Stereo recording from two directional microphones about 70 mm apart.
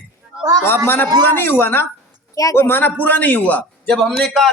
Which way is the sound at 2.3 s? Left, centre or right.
Left.